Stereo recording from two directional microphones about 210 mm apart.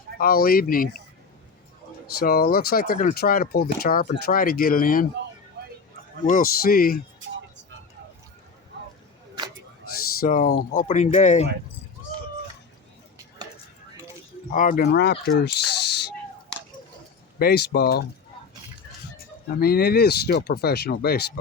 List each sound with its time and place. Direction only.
0.2 s speech: 45° left (ahead or behind)
2.1 s speech: 45° left (ahead or behind)
6.2 s speech: 40° left (ahead or behind)
7.2 s music: 60° right (ahead or behind)
10.2 s speech: 40° left (ahead or behind)
14.5 s speech: 40° left (ahead or behind)
16.5 s scissors: 5° left (ahead or behind)
17.4 s speech: 50° left (ahead or behind)
19.1 s speech: 45° left (ahead or behind)